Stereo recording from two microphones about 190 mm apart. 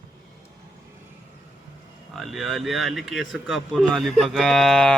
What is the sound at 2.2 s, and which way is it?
Speech, centre (ahead or behind).